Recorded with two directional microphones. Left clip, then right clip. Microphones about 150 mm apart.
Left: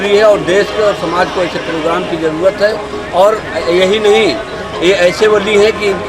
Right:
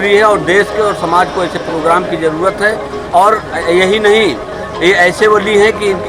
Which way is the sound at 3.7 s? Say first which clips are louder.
Even; 15° right (ahead or behind).